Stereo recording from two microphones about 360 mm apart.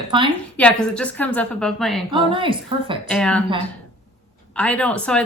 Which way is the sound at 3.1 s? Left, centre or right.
Centre.